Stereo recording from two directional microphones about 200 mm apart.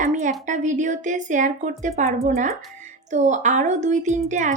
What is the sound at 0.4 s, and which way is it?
Speech, 40° right (ahead or behind).